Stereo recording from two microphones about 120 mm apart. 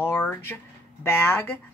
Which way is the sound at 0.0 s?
20° left (ahead or behind).